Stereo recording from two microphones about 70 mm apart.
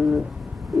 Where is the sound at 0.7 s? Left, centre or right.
Centre.